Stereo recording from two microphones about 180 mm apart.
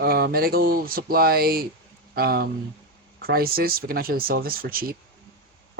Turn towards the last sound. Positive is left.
turn(degrees=-55)  # may be behind; listen again after turning